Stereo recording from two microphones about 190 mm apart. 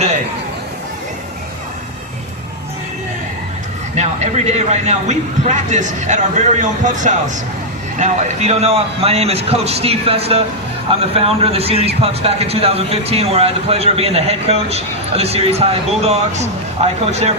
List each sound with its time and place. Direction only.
3.9 s speech: 35° right (ahead or behind)